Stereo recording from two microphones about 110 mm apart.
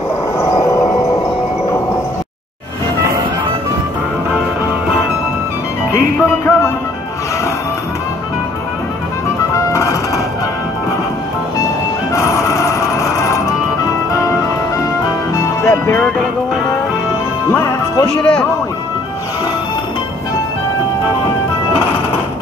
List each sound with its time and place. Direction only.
5.9 s music: 25° left (ahead or behind)
9.7 s music: 25° left (ahead or behind)
12.1 s music: 30° left (ahead or behind)
15.6 s music: 25° left (ahead or behind)
17.5 s music: 30° left (ahead or behind)
18.2 s music: 10° left (ahead or behind)